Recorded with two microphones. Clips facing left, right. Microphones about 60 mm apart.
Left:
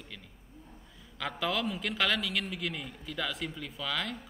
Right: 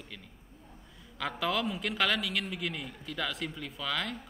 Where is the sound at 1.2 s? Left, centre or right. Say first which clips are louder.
Right 1 dB; centre.